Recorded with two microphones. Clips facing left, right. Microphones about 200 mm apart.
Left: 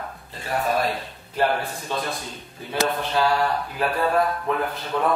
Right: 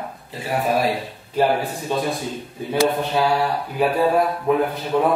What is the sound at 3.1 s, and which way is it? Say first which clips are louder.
Speech: right 2 dB; 10° right (ahead or behind).